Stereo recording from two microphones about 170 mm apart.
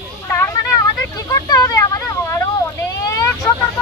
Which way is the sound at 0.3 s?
15° left (ahead or behind).